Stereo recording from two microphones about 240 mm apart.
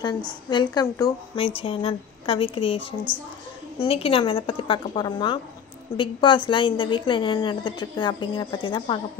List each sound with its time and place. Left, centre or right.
0.7 s a woman's voice: centre